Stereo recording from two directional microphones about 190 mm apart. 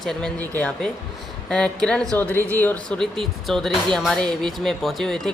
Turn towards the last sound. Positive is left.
turn(degrees=0)  # may be behind; listen again after turning